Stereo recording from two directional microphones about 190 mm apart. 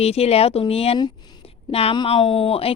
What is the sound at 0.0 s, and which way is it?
Speech, 35° left (ahead or behind).